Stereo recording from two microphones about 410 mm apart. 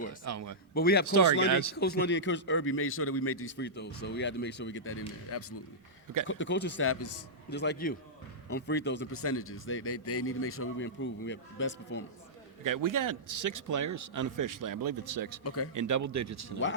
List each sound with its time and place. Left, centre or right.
0.3 s a man's voice: right
0.7 s a man's voice: left
1.0 s speech: right
1.8 s a man's voice: left
12.6 s speech: right
15.4 s a man's voice: left
15.7 s speech: right